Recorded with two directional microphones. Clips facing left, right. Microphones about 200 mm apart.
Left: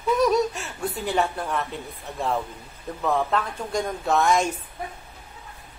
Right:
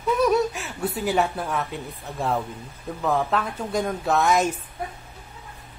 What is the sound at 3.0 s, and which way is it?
Speech, centre (ahead or behind).